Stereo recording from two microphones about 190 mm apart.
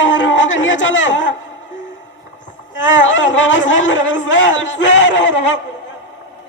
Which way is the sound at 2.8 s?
80° left.